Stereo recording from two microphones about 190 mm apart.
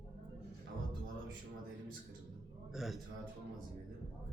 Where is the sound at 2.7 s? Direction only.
Centre (ahead or behind).